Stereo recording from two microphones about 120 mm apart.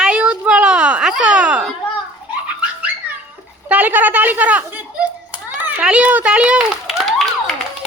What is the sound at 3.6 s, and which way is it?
A woman's voice, 15° right (ahead or behind).